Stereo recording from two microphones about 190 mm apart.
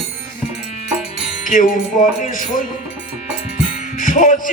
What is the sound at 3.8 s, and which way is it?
Music, 45° left (ahead or behind).